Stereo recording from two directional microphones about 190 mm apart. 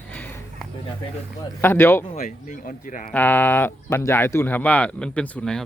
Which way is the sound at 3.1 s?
10° left (ahead or behind).